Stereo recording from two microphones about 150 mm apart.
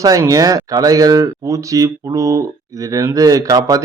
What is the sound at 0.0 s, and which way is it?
Speech, 25° right (ahead or behind).